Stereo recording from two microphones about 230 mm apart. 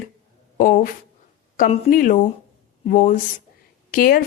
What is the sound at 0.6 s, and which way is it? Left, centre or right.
A woman's voice, left.